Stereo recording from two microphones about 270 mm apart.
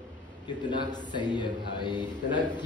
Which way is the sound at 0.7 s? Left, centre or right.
Centre.